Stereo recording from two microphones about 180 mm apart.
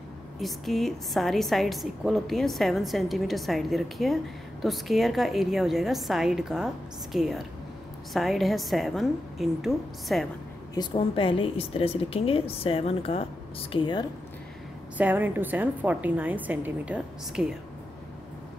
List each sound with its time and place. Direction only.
0.4 s a woman's voice: centre (ahead or behind)
10.7 s a woman's voice: 25° left (ahead or behind)
15.0 s a woman's voice: 10° right (ahead or behind)